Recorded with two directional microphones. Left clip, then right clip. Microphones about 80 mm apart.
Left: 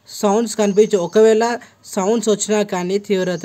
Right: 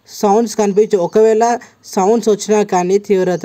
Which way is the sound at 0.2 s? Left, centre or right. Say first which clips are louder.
Right 4 dB; right.